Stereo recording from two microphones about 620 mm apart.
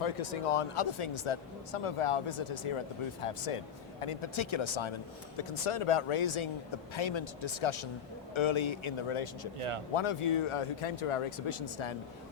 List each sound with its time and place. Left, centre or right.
0.0 s speech: left
9.6 s speech: right
9.9 s speech: left